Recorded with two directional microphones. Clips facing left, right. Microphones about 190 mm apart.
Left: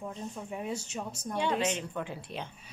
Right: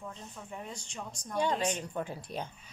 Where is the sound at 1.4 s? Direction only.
40° right (ahead or behind).